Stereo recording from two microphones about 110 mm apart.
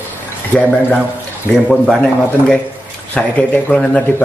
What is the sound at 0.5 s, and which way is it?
Speech, 15° left (ahead or behind).